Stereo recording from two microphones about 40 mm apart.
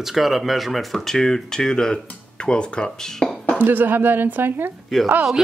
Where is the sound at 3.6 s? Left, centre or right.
Right.